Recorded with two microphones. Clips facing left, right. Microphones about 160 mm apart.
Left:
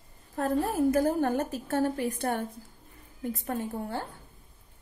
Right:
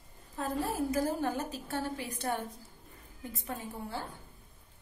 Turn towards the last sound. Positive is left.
turn(degrees=50)  # may be behind; listen again after turning